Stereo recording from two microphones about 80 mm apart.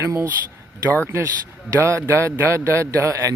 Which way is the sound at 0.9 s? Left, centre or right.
Left.